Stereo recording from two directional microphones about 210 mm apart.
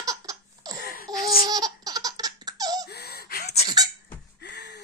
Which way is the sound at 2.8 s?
50° left (ahead or behind).